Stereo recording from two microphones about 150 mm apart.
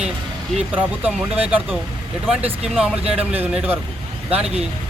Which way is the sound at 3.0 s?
40° right (ahead or behind).